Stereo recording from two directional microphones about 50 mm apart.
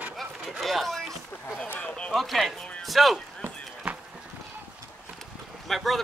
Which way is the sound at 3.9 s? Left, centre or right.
Right.